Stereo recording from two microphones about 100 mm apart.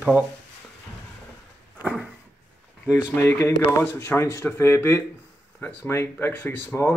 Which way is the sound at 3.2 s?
25° left (ahead or behind).